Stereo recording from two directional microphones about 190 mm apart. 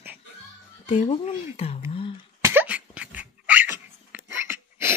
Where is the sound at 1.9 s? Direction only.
30° left (ahead or behind).